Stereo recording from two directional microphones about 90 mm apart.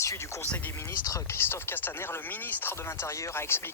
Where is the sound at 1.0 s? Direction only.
35° left (ahead or behind).